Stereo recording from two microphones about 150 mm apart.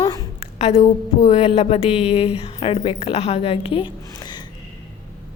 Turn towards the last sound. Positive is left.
turn(degrees=30)  # may be behind; listen again after turning